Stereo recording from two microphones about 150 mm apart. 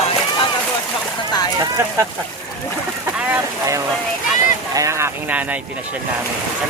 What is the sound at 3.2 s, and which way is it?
Speech, 15° right (ahead or behind).